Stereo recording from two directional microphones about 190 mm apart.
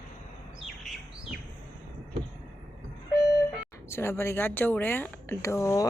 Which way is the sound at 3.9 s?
15° left (ahead or behind).